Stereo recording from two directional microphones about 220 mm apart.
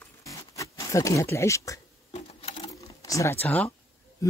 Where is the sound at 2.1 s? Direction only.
25° left (ahead or behind).